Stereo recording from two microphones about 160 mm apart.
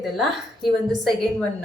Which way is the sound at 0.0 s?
Centre (ahead or behind).